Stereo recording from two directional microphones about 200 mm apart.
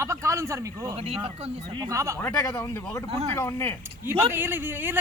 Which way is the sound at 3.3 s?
15° left (ahead or behind).